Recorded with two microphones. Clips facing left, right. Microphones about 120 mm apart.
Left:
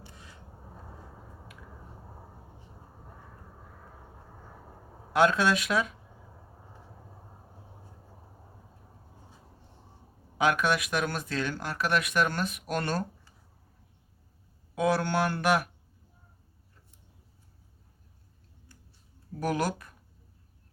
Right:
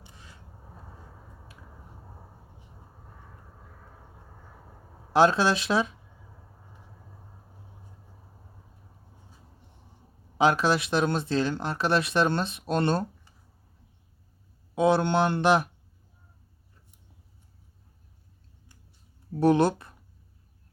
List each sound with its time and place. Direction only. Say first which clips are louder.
5.1 s speech: right 3 dB; 30° right (ahead or behind)
10.3 s speech: right 3 dB; 30° right (ahead or behind)
14.8 s speech: right 4 dB; 25° right (ahead or behind)
19.3 s speech: right 8 dB; 30° right (ahead or behind)